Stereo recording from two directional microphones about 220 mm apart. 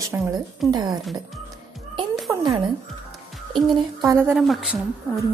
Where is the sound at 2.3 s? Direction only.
15° right (ahead or behind).